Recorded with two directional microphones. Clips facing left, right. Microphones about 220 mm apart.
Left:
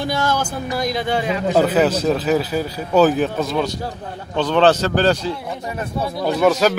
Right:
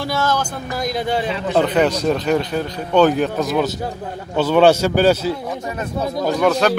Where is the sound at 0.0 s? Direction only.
15° left (ahead or behind).